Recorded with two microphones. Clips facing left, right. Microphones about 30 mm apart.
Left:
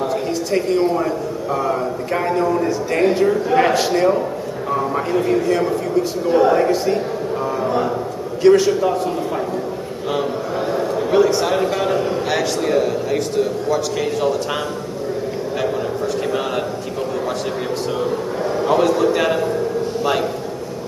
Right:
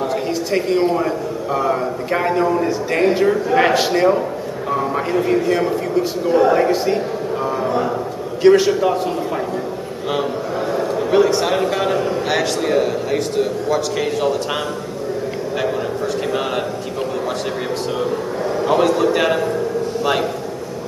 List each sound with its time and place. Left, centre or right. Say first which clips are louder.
0.0 s a man's voice: even; centre
6.5 s a man's voice: even; centre
8.4 s a man's voice: right 1 dB; centre
10.7 s a sound: right 1 dB; centre
11.6 s a man's voice: even; centre
18.6 s a man's voice: even; centre